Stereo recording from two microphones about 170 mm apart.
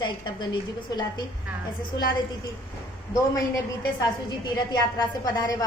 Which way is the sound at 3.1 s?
20° left (ahead or behind).